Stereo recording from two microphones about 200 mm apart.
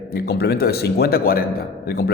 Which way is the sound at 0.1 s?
50° left (ahead or behind).